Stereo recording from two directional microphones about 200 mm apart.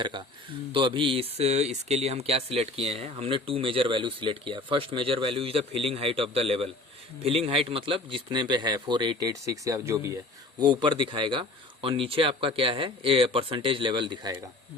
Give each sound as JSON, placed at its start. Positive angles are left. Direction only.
{"t": 0.0, "sound": "speech", "side_deg": -25}